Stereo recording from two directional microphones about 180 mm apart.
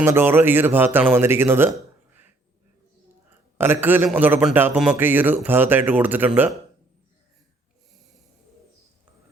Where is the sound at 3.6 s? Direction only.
10° right (ahead or behind).